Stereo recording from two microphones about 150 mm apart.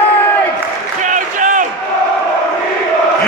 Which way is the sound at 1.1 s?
60° right (ahead or behind).